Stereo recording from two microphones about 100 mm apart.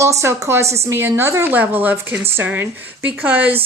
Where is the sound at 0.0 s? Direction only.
30° right (ahead or behind).